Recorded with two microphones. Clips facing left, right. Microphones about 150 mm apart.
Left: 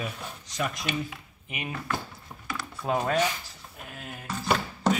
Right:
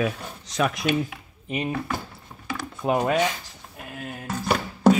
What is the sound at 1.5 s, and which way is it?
Speech, 35° right (ahead or behind).